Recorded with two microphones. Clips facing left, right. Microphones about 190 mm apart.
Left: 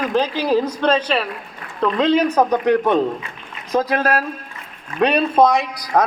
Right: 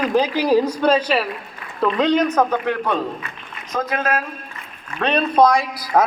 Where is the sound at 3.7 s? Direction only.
35° left (ahead or behind).